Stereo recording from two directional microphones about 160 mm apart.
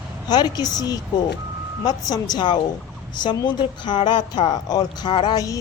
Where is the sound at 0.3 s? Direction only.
25° left (ahead or behind).